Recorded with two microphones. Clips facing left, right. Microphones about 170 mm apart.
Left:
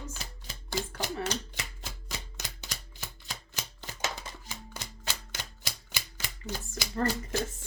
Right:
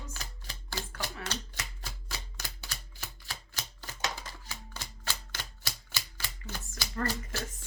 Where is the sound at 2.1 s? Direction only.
20° left (ahead or behind).